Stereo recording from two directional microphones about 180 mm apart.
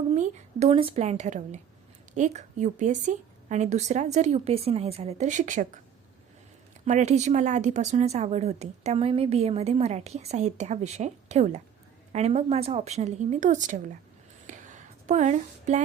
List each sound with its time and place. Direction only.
0.1 s a woman's voice: 40° right (ahead or behind)
6.8 s speech: 40° right (ahead or behind)
14.4 s a sound: 45° right (ahead or behind)